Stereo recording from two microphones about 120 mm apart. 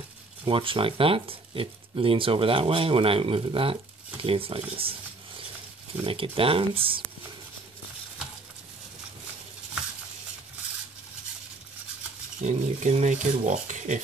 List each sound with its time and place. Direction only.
0.5 s speech: 45° right (ahead or behind)
6.0 s speech: 50° right (ahead or behind)
12.4 s speech: 80° right